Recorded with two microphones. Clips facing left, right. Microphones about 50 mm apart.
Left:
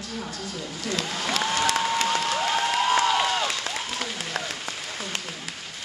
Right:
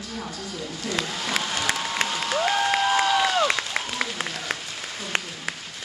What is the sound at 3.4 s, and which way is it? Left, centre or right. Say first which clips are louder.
Applause: right 4 dB; right.